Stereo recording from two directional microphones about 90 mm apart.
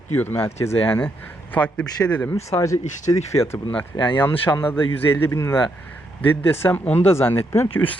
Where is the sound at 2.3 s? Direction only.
35° left (ahead or behind).